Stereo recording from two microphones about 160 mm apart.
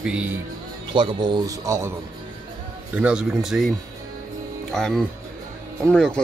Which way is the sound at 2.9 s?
5° right (ahead or behind).